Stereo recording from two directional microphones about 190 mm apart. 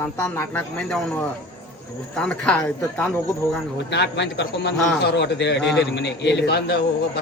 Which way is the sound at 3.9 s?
65° left (ahead or behind).